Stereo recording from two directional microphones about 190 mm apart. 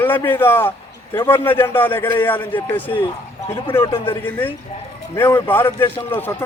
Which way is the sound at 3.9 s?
25° left (ahead or behind).